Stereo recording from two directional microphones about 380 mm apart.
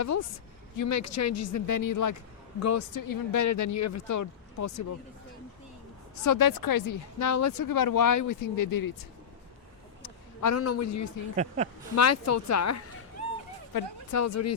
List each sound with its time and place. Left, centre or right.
0.0 s speech: left
6.2 s speech: left
10.4 s speech: left
11.3 s speech: centre
11.9 s speech: left
14.1 s speech: left